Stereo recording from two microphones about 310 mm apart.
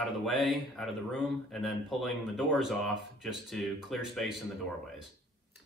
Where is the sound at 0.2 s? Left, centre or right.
Centre.